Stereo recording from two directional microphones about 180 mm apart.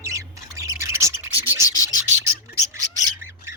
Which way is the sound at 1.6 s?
20° left (ahead or behind).